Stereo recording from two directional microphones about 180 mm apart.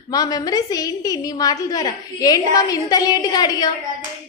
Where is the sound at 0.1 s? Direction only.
20° left (ahead or behind).